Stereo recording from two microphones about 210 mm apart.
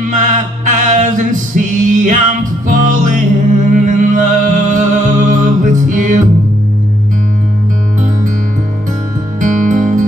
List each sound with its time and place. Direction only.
0.0 s a capella: 40° right (ahead or behind)
2.7 s music: 40° right (ahead or behind)
9.4 s music: 40° right (ahead or behind)